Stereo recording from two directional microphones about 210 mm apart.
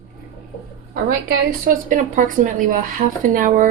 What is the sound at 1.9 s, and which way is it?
Speech, 40° right (ahead or behind).